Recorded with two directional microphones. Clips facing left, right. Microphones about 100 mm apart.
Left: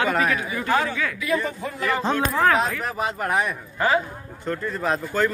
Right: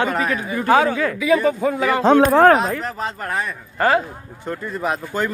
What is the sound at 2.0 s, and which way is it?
Speech, 60° right (ahead or behind).